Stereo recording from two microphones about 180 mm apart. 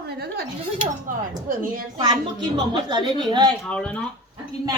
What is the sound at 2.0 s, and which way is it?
A woman's voice, 25° right (ahead or behind).